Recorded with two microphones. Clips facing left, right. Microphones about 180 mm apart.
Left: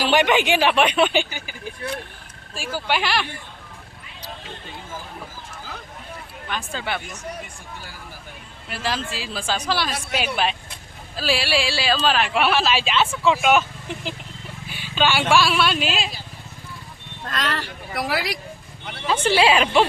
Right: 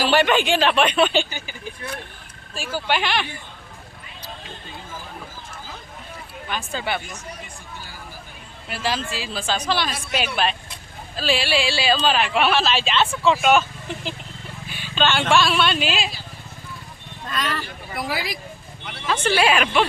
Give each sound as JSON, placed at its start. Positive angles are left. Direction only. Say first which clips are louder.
{"t": 0.0, "sound": "speech", "louder": "even", "side_deg": 15}
{"t": 2.6, "sound": "speech", "louder": "right 1 dB", "side_deg": 5}
{"t": 6.5, "sound": "speech", "louder": "right 1 dB", "side_deg": -5}
{"t": 8.7, "sound": "speech", "louder": "right 1 dB", "side_deg": 0}
{"t": 17.2, "sound": "speech", "louder": "even", "side_deg": 85}
{"t": 19.0, "sound": "a woman's voice", "louder": "left 2 dB", "side_deg": 30}